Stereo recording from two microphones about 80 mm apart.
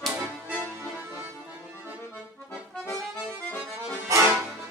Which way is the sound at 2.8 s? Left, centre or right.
Left.